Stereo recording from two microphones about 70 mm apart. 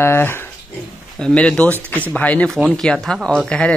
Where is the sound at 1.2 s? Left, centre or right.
Centre.